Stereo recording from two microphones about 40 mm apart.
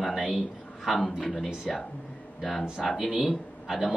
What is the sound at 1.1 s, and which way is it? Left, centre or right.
A man's voice, centre.